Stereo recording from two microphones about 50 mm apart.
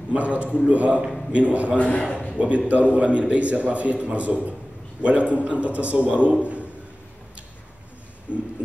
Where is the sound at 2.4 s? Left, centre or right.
Right.